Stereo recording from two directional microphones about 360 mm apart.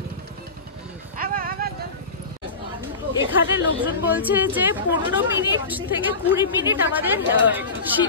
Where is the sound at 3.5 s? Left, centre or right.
Centre.